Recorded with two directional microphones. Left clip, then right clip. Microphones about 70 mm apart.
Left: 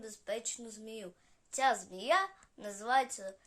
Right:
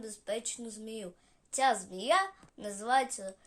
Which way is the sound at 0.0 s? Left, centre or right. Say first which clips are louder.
Right 2 dB; left.